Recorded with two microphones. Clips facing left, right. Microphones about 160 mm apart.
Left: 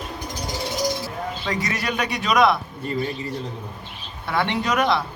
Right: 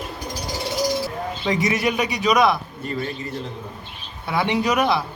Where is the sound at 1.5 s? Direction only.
15° right (ahead or behind).